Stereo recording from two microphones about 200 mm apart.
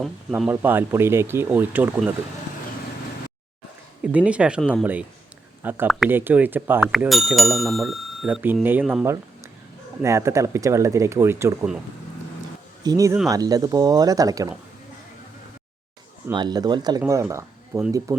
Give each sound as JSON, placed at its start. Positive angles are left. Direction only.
{"t": 0.0, "sound": "speech", "side_deg": -5}
{"t": 4.0, "sound": "speech", "side_deg": -5}
{"t": 5.6, "sound": "speech", "side_deg": -10}
{"t": 10.0, "sound": "speech", "side_deg": -15}
{"t": 12.8, "sound": "speech", "side_deg": -15}
{"t": 16.3, "sound": "speech", "side_deg": -20}